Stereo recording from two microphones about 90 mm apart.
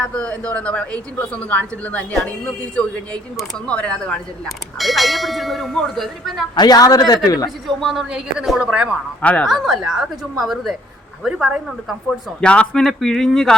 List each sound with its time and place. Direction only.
0.0 s speech: 15° left (ahead or behind)
4.4 s speech: centre (ahead or behind)
6.6 s a man's voice: 45° left (ahead or behind)
7.8 s speech: 5° right (ahead or behind)
9.2 s speech: 15° left (ahead or behind)
9.5 s speech: 5° right (ahead or behind)
12.4 s speech: 10° left (ahead or behind)